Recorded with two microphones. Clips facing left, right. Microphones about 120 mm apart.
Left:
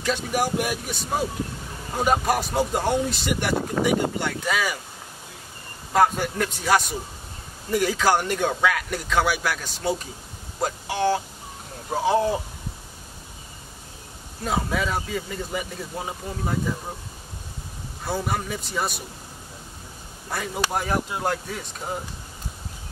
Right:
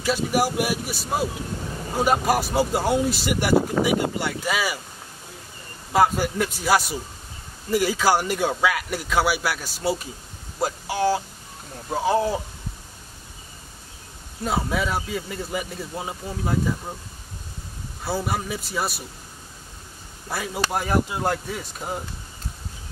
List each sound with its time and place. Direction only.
0.0 s speech: 5° right (ahead or behind)
5.9 s speech: 5° right (ahead or behind)
14.4 s speech: 5° right (ahead or behind)
18.0 s speech: 5° right (ahead or behind)
20.2 s speech: 5° right (ahead or behind)